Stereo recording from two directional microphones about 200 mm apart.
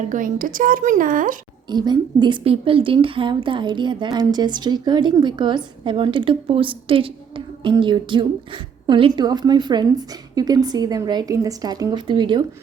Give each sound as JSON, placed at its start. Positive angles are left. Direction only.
{"t": 0.0, "sound": "speech", "side_deg": -40}
{"t": 1.7, "sound": "a woman's voice", "side_deg": -20}